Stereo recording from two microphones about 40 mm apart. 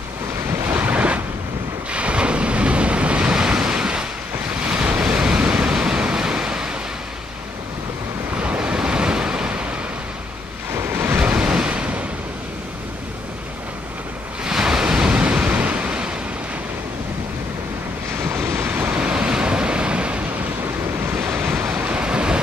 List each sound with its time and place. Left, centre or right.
0.7 s waves: right
1.9 s ocean: right
3.3 s waves: centre
8.4 s waves: right
10.7 s waves: right
11.1 s waves: right
14.4 s waves: centre
18.2 s waves: right
18.9 s waves: right
21.6 s waves: right